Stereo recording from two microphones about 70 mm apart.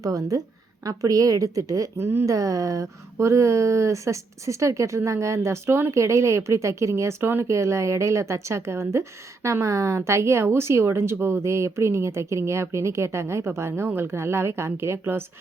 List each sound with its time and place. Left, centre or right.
0.0 s a woman's voice: right
2.0 s a woman's voice: right
2.2 s speech: right
7.4 s a woman's voice: right